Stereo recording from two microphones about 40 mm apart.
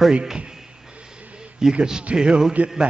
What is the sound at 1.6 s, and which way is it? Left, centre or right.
Music, centre.